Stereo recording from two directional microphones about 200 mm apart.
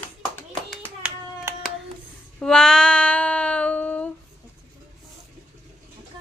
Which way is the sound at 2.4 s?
5° left (ahead or behind).